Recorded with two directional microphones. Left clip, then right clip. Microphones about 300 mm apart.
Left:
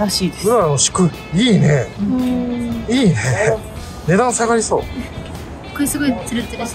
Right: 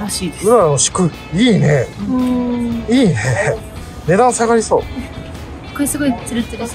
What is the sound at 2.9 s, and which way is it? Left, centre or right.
Speech, centre.